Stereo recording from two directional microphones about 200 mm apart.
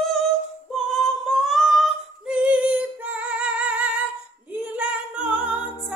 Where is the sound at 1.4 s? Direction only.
Centre (ahead or behind).